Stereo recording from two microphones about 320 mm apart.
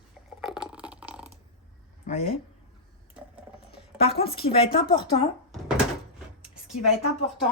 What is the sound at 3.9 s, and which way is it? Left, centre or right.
Speech, centre.